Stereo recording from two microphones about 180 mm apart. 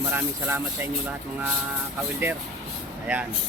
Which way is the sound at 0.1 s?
10° right (ahead or behind).